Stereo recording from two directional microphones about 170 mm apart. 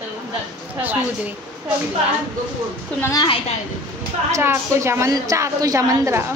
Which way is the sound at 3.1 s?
25° left (ahead or behind).